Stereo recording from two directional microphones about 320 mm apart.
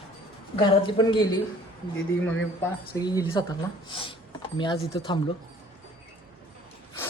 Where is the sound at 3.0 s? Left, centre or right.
Centre.